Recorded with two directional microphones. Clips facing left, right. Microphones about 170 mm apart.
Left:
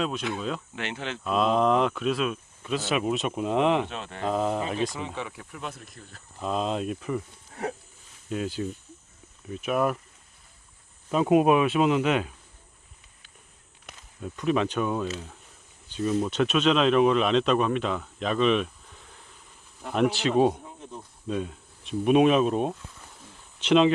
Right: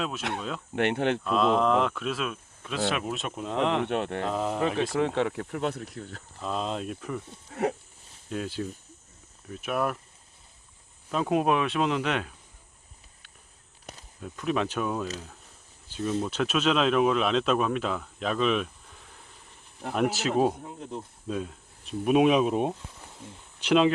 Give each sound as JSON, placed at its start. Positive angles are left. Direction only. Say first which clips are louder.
{"t": 0.2, "sound": "speech", "louder": "left 1 dB", "side_deg": -70}
{"t": 0.7, "sound": "speech", "louder": "right 9 dB", "side_deg": -60}
{"t": 1.2, "sound": "speech", "louder": "left 4 dB", "side_deg": 5}
{"t": 3.8, "sound": "speech", "louder": "right 6 dB", "side_deg": -60}
{"t": 4.3, "sound": "speech", "louder": "left 4 dB", "side_deg": 0}
{"t": 4.9, "sound": "speech", "louder": "right 9 dB", "side_deg": -70}
{"t": 6.4, "sound": "speech", "louder": "left 3 dB", "side_deg": 5}
{"t": 8.3, "sound": "speech", "louder": "left 2 dB", "side_deg": 0}
{"t": 11.1, "sound": "speech", "louder": "left 5 dB", "side_deg": 10}
{"t": 14.2, "sound": "speech", "louder": "left 3 dB", "side_deg": 0}
{"t": 19.9, "sound": "speech", "louder": "left 2 dB", "side_deg": -5}
{"t": 23.6, "sound": "speech", "louder": "left 2 dB", "side_deg": -5}